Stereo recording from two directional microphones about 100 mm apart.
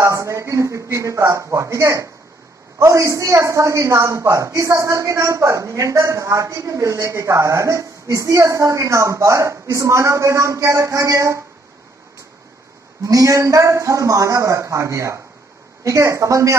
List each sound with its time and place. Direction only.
0.0 s a woman's voice: 30° right (ahead or behind)
13.0 s a woman's voice: 35° right (ahead or behind)